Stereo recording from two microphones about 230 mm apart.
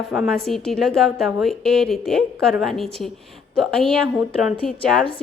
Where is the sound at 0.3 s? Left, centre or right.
Centre.